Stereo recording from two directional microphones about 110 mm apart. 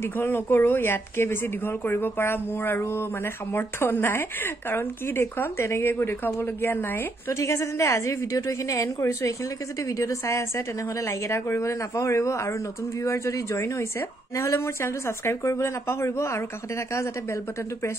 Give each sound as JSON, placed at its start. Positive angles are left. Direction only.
{"t": 0.0, "sound": "speech", "side_deg": 20}